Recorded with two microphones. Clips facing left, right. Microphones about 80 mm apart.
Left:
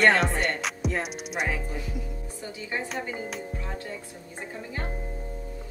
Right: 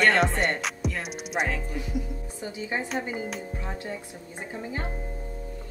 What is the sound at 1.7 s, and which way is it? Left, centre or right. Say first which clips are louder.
Speech: right 3 dB; centre.